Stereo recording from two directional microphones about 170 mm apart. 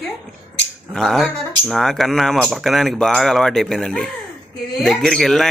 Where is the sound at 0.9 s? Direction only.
5° left (ahead or behind).